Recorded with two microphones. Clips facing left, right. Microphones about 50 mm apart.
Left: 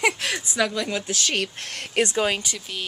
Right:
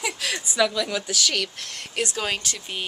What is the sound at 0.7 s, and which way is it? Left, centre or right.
A woman's voice, left.